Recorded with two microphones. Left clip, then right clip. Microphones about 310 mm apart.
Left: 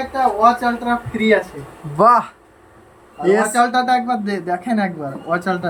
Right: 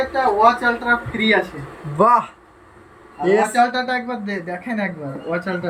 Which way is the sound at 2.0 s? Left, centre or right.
Centre.